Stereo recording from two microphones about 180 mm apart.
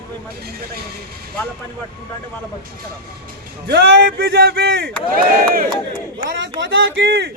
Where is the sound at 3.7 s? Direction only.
60° right (ahead or behind).